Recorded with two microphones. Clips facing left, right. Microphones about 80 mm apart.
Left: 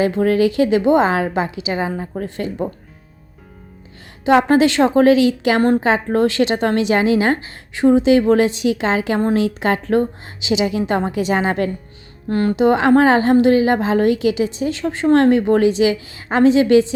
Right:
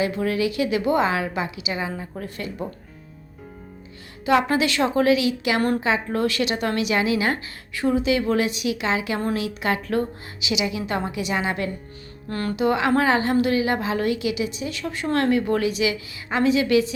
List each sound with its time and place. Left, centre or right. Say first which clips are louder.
0.0 s a woman's voice: left 7 dB; left
4.3 s a woman's voice: left 7 dB; left
5.8 s a woman's voice: left 6 dB; left
12.3 s a woman's voice: left 7 dB; left